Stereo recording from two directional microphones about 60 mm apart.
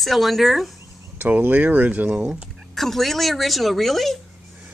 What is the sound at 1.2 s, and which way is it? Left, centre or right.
Speech, right.